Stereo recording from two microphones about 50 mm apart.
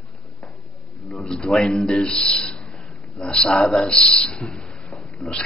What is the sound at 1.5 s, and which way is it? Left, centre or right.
Speech, centre.